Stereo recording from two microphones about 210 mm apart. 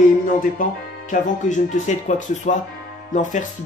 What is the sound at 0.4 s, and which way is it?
Speech, 40° left (ahead or behind).